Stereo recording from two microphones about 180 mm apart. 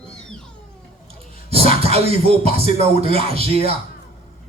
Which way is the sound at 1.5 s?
30° right (ahead or behind).